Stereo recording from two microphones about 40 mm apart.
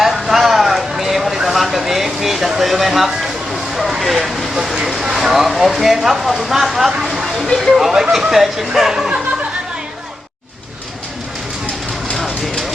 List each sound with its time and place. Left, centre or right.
0.0 s a sound: centre
5.0 s speech: centre
7.3 s speech: centre
7.7 s speech: centre
12.1 s vehicle: centre